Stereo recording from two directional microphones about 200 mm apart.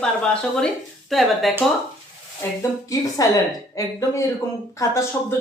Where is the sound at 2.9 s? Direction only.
15° left (ahead or behind).